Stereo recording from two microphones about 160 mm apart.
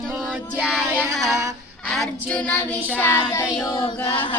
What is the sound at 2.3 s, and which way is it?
Speech, 10° left (ahead or behind).